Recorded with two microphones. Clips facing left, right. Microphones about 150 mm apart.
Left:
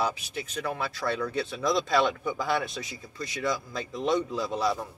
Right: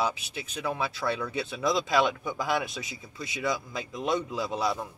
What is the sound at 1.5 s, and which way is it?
Speech, 20° right (ahead or behind).